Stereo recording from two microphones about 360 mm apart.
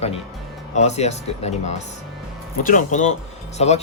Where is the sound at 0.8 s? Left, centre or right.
Centre.